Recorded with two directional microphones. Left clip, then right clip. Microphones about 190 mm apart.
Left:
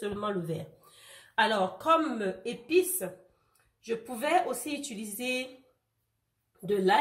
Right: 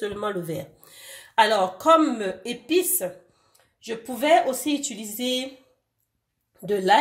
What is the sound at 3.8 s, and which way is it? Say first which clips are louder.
Speech: right 5 dB; 55° right (ahead or behind).